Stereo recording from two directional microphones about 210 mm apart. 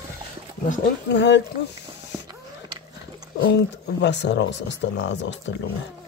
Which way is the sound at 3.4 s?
55° left (ahead or behind).